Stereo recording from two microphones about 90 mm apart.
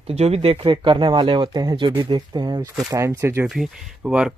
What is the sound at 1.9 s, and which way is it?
Speech, 65° right (ahead or behind).